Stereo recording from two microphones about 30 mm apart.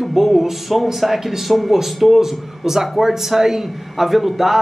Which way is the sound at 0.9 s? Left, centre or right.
Centre.